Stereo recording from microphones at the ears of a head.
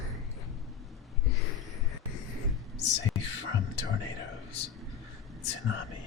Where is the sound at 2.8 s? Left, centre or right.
Left.